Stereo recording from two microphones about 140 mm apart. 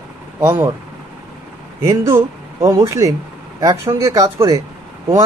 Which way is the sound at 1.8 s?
20° right (ahead or behind).